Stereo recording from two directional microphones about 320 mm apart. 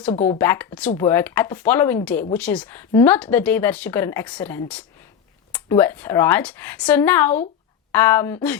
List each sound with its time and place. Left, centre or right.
0.1 s speech: centre
0.3 s speech: centre